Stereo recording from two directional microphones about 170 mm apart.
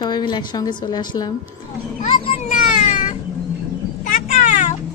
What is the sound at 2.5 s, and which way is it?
Baby cry, 45° left (ahead or behind).